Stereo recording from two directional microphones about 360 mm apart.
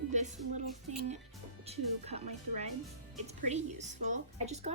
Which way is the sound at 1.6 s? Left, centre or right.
Centre.